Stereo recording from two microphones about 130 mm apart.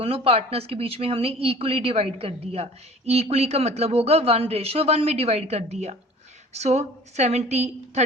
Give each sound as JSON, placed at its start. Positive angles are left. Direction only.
{"t": 0.0, "sound": "a woman's voice", "side_deg": -50}